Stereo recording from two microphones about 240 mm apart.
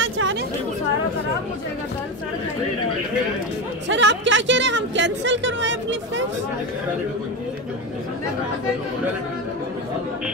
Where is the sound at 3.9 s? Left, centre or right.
Right.